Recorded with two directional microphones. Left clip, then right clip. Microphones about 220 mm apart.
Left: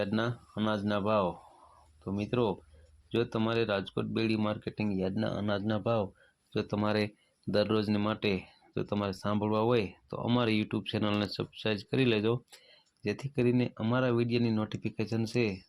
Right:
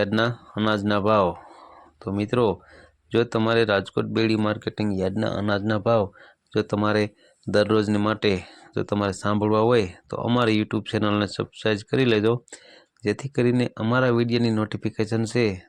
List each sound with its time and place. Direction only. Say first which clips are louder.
0.0 s speech: right 10 dB; 30° right (ahead or behind)